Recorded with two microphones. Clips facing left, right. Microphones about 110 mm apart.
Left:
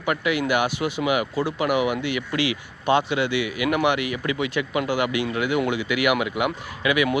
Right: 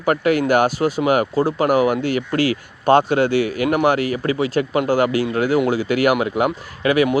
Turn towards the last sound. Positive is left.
turn(degrees=-40)  # may be behind; listen again after turning